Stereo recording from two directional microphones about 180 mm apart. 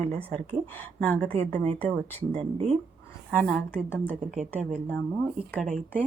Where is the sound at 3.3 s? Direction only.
5° left (ahead or behind).